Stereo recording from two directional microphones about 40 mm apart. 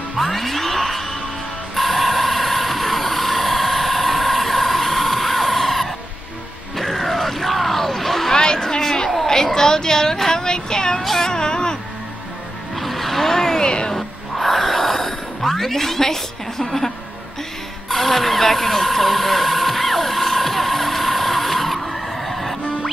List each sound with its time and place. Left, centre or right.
0.2 s music: centre
1.8 s vehicle: centre
6.8 s a sound: centre
8.3 s a sound: centre
9.3 s child singing: centre
11.0 s wail: centre
12.7 s vehicle: centre
13.9 s a sound: centre
17.8 s vehicle: centre